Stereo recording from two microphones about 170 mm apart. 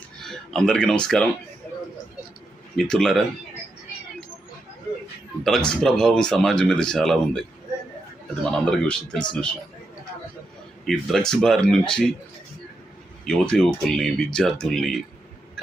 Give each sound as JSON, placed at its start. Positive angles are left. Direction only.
{"t": 0.2, "sound": "speech", "side_deg": 0}
{"t": 2.9, "sound": "speech", "side_deg": 0}
{"t": 5.4, "sound": "speech", "side_deg": 0}
{"t": 8.4, "sound": "speech", "side_deg": 5}
{"t": 10.8, "sound": "speech", "side_deg": 0}
{"t": 13.2, "sound": "speech", "side_deg": 5}